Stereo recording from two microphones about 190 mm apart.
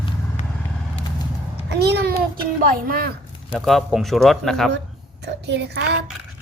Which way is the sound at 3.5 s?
Centre (ahead or behind).